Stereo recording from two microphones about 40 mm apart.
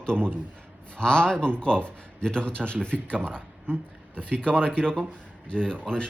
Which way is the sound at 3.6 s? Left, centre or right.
Right.